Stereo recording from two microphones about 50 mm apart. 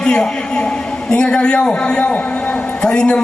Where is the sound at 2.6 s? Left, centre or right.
Left.